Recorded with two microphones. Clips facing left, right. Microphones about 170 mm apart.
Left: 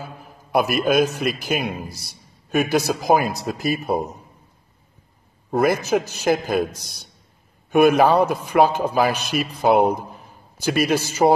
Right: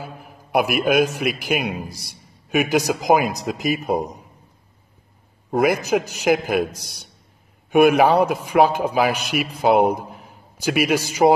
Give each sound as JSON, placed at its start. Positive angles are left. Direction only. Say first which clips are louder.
{"t": 0.0, "sound": "a man's voice", "louder": "right 1 dB", "side_deg": -10}
{"t": 5.5, "sound": "a man's voice", "louder": "even", "side_deg": -10}